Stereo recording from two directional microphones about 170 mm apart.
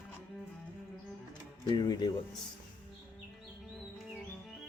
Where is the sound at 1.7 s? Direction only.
25° left (ahead or behind).